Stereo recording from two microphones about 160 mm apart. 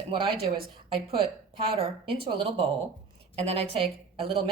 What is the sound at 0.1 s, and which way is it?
Speech, 35° right (ahead or behind).